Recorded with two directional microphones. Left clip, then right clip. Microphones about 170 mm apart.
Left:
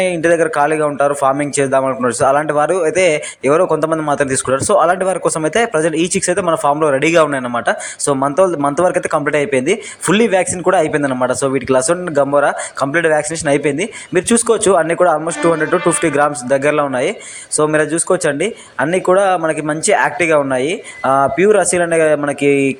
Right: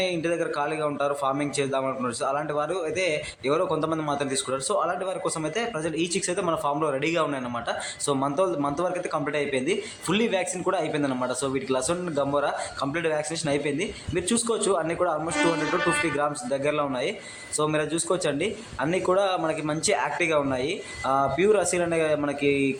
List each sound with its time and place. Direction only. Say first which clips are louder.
0.0 s a man's voice: left 13 dB; 40° left (ahead or behind)